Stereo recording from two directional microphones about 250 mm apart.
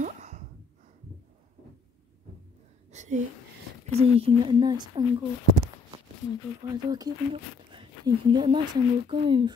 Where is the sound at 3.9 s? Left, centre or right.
Right.